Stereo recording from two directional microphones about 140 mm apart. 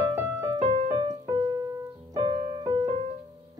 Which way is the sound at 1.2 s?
35° right (ahead or behind).